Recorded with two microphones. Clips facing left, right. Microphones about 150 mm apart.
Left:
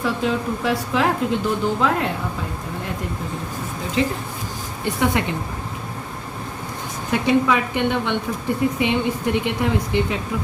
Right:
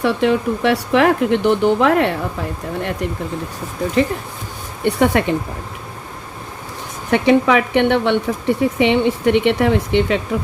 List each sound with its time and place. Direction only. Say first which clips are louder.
0.0 s speech: right 6 dB; 70° right (ahead or behind)
4.8 s speech: right 6 dB; 60° right (ahead or behind)
7.1 s speech: right 5 dB; 70° right (ahead or behind)